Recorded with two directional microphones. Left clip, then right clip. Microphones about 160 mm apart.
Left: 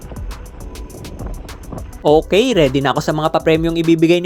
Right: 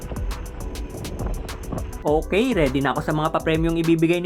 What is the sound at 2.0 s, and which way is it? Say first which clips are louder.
Speech: left 8 dB; 25° left (ahead or behind).